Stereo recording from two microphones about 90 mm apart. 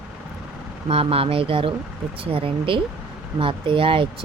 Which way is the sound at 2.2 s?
90° right.